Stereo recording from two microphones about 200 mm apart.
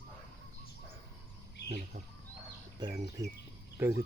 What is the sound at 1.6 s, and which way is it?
Bird, 60° left (ahead or behind).